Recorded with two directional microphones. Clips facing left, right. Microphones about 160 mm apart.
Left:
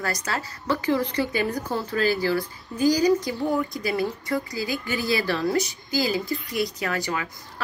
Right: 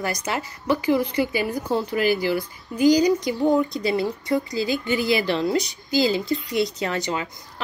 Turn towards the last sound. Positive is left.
turn(degrees=-25)  # may be behind; listen again after turning